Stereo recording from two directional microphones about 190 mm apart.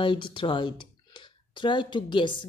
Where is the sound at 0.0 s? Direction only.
25° left (ahead or behind).